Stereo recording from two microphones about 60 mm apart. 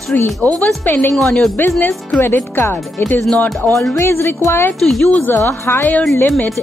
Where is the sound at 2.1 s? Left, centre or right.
Left.